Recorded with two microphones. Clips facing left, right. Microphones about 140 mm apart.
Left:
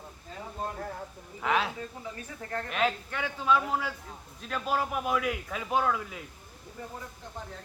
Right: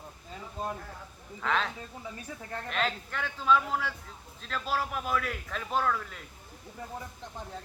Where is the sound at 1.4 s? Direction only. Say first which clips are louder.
Left 2 dB; 10° left (ahead or behind).